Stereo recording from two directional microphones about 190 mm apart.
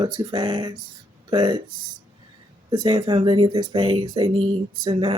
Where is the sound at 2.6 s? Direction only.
20° right (ahead or behind).